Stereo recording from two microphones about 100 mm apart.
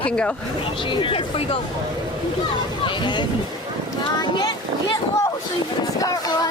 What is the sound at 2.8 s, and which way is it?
Speech, 50° left (ahead or behind).